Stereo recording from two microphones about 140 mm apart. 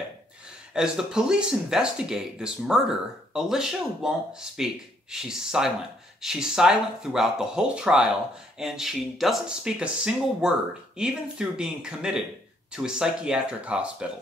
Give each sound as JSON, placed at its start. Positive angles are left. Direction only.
{"t": 0.5, "sound": "speech", "side_deg": -5}